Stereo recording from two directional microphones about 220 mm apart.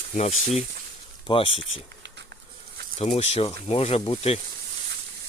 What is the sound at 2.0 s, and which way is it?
Patter, 50° right (ahead or behind).